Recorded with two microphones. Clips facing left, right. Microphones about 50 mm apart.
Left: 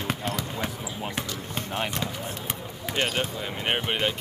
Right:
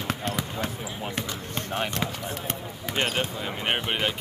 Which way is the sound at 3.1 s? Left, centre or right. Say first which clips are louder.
Even; centre.